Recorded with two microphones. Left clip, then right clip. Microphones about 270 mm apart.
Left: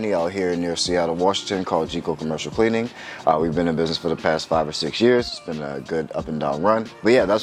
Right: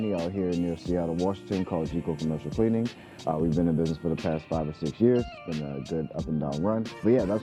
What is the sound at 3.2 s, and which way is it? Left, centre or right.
Speech, centre.